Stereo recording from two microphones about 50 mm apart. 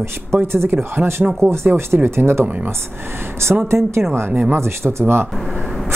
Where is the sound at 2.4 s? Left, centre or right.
Right.